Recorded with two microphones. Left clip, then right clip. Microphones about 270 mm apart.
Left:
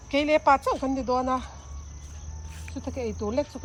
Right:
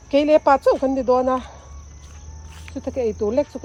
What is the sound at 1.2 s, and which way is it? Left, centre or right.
Cricket, right.